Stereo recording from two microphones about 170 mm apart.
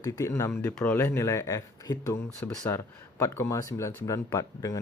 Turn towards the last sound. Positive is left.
turn(degrees=20)  # may be behind; listen again after turning